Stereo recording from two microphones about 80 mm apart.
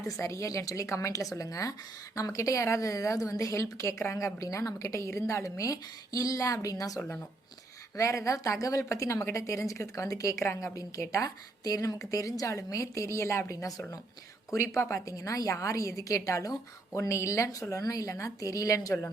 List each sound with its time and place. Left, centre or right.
0.1 s a woman's voice: left
4.4 s a woman's voice: left
13.5 s a woman's voice: left